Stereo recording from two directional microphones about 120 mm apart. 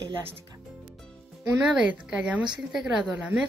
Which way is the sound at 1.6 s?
10° right (ahead or behind).